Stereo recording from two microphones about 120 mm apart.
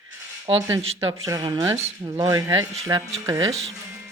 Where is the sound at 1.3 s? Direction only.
30° right (ahead or behind).